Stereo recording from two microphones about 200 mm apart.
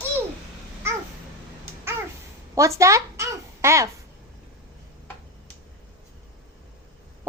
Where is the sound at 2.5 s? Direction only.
15° right (ahead or behind).